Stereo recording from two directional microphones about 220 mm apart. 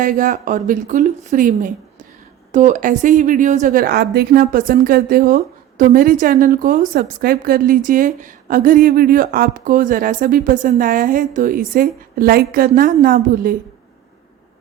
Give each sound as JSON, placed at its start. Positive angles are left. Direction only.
{"t": 0.0, "sound": "a woman's voice", "side_deg": -35}